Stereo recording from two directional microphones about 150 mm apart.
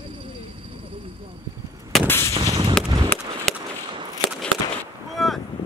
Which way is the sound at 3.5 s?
5° left (ahead or behind).